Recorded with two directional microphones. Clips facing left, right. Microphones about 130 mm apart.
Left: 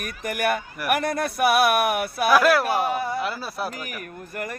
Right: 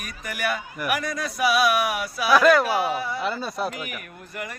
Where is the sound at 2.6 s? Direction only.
50° left (ahead or behind).